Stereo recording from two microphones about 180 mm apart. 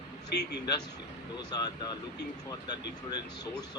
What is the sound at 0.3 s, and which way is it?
Speech, 65° left (ahead or behind).